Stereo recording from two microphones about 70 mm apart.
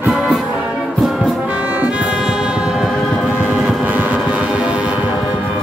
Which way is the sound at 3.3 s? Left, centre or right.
Left.